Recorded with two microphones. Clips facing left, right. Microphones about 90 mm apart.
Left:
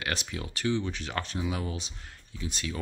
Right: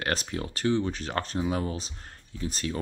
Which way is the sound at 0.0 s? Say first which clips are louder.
Right 4 dB; 40° right (ahead or behind).